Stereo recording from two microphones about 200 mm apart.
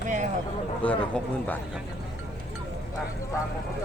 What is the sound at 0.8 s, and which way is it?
Speech, 5° left (ahead or behind).